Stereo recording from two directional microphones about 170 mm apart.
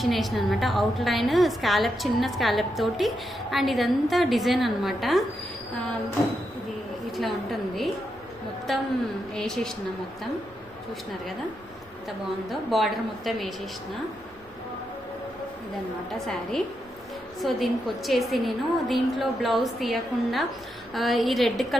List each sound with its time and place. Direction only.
0.0 s a woman's voice: centre (ahead or behind)
8.7 s a woman's voice: centre (ahead or behind)
12.0 s a woman's voice: centre (ahead or behind)
16.1 s a woman's voice: centre (ahead or behind)